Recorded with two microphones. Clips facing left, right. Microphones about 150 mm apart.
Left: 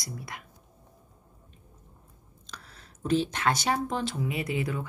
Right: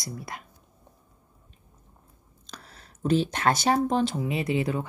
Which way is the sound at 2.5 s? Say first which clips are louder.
Right 2 dB; 35° right (ahead or behind).